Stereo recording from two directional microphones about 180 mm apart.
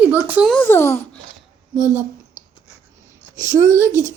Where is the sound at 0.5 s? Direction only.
10° left (ahead or behind).